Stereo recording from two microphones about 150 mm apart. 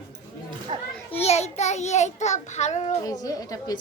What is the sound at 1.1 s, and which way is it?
Child singing, 45° left (ahead or behind).